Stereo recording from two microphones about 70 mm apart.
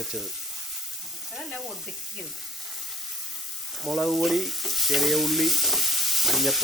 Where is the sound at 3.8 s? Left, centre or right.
Centre.